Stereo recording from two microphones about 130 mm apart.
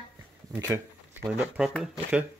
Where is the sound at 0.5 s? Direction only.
20° right (ahead or behind).